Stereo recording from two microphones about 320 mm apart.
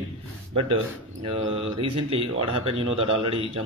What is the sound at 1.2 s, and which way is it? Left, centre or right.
Speech, centre.